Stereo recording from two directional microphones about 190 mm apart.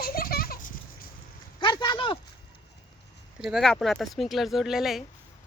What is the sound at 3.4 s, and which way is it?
Speech, centre (ahead or behind).